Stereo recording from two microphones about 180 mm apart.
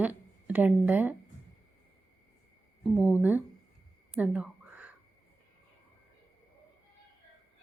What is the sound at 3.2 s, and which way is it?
Speech, 10° right (ahead or behind).